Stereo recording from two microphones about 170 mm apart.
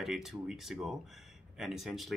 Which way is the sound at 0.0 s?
Centre (ahead or behind).